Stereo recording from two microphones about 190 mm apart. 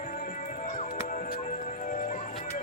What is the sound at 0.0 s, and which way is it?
Music, 45° left (ahead or behind).